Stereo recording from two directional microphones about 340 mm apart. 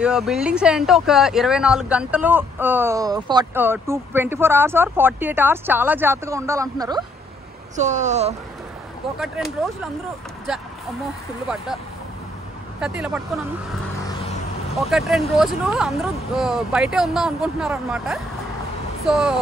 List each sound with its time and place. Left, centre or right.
0.0 s speech: centre
7.7 s speech: right
9.4 s speech: centre
11.4 s speech: centre
12.8 s speech: centre
14.0 s vehicle: centre
14.8 s speech: centre